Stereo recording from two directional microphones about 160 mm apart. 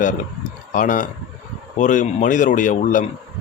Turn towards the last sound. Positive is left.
turn(degrees=55)  # may be behind; listen again after turning